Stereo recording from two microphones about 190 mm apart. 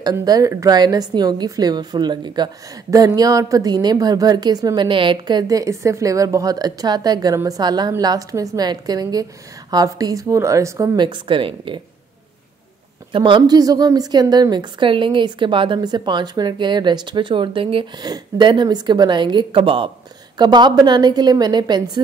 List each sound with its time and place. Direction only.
0.0 s a woman's voice: 20° right (ahead or behind)
13.1 s a woman's voice: 25° right (ahead or behind)